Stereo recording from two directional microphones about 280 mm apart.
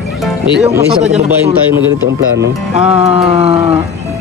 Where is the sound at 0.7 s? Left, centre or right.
Centre.